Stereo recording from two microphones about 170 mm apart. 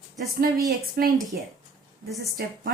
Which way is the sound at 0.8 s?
60° right (ahead or behind).